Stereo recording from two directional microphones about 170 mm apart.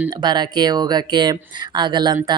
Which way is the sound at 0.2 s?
25° right (ahead or behind).